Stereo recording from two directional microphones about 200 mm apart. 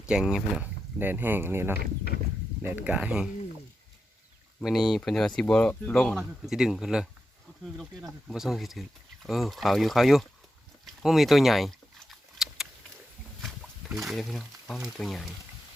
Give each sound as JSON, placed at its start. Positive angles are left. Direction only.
{"t": 0.1, "sound": "speech", "side_deg": -5}
{"t": 4.6, "sound": "speech", "side_deg": 0}
{"t": 10.8, "sound": "a sound", "side_deg": 0}
{"t": 13.9, "sound": "speech", "side_deg": 0}